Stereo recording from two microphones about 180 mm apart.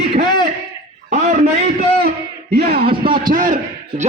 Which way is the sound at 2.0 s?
60° right (ahead or behind).